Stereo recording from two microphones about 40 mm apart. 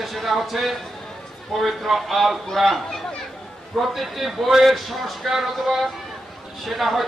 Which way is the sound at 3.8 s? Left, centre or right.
Centre.